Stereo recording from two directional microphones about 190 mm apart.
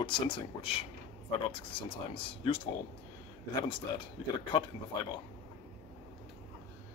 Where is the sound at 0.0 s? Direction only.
25° left (ahead or behind).